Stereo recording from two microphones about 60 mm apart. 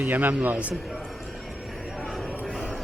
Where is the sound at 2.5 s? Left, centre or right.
Centre.